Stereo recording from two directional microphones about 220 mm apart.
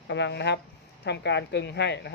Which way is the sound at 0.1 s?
55° left (ahead or behind).